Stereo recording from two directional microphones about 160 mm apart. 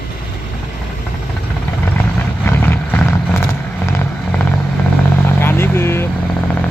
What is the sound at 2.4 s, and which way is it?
Vehicle, 15° left (ahead or behind).